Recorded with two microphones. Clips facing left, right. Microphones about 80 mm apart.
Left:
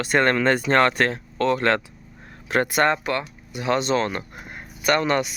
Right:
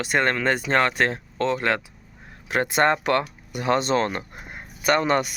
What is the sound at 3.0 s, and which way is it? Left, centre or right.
Speech, right.